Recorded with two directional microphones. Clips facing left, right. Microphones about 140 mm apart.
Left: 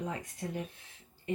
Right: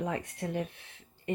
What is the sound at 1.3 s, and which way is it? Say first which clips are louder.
Speech: right 2 dB; 60° right (ahead or behind).